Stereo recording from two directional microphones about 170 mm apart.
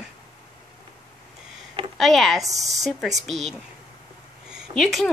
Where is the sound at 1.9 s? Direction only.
Centre (ahead or behind).